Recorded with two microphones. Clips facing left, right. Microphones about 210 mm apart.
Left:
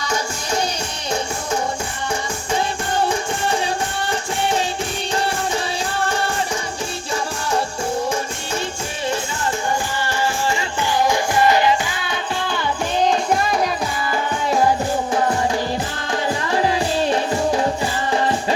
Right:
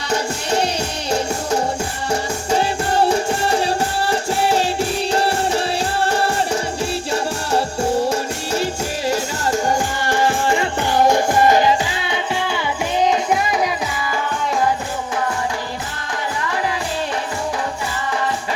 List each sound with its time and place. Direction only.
2.5 s music: 35° right (ahead or behind)
6.1 s music: 35° right (ahead or behind)
9.6 s music: 50° right (ahead or behind)
13.1 s music: 15° right (ahead or behind)